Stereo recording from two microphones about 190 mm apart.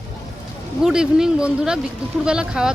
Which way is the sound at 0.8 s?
5° right (ahead or behind).